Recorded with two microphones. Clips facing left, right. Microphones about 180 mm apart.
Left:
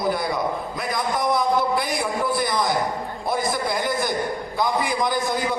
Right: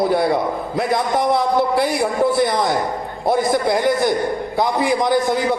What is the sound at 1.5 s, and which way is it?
Speech, 60° right (ahead or behind).